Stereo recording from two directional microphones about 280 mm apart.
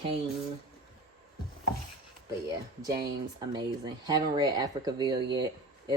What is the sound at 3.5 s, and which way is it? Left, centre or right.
Speech, centre.